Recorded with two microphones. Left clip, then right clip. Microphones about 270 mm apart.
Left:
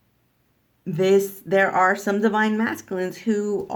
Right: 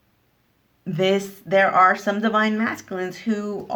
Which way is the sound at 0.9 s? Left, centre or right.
Centre.